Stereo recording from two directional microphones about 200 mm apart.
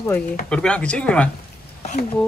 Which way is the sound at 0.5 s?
5° left (ahead or behind).